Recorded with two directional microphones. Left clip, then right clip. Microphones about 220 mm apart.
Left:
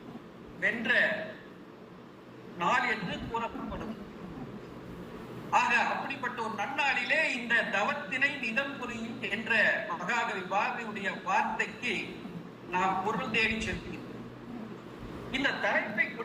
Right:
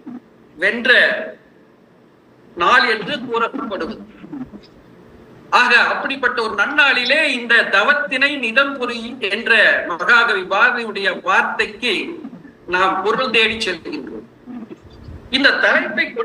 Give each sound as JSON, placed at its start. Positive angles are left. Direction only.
{"t": 0.6, "sound": "a man's voice", "side_deg": -55}
{"t": 2.6, "sound": "a man's voice", "side_deg": -55}
{"t": 5.5, "sound": "a man's voice", "side_deg": -55}
{"t": 15.3, "sound": "a man's voice", "side_deg": -55}